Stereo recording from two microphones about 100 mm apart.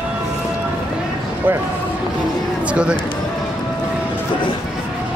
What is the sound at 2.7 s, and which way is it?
Speech, 10° right (ahead or behind).